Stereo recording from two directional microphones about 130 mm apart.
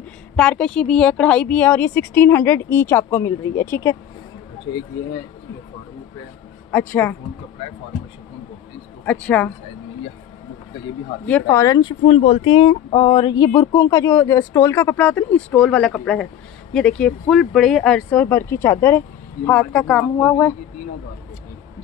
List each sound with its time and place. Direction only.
0.4 s a woman's voice: 5° left (ahead or behind); by 3.9 s 20° left (ahead or behind)
6.7 s a woman's voice: 15° left (ahead or behind)
9.0 s a woman's voice: 10° left (ahead or behind)
11.4 s speech: 25° left (ahead or behind)
12.1 s a woman's voice: 50° left (ahead or behind); by 20.3 s 10° left (ahead or behind)